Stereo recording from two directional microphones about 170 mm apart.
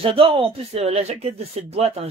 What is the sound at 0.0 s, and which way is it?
A man's voice, 35° right (ahead or behind).